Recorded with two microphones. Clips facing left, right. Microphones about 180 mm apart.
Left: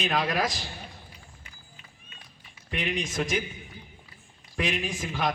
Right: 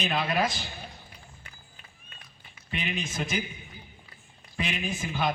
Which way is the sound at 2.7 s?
85° left.